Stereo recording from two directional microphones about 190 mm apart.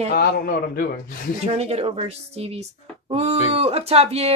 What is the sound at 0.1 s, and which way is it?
A man's voice, 55° left (ahead or behind).